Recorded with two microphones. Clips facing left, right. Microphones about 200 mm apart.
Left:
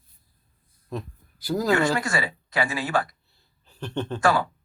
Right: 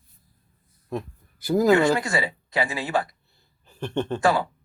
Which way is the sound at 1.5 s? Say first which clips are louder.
Right 4 dB; 20° right (ahead or behind).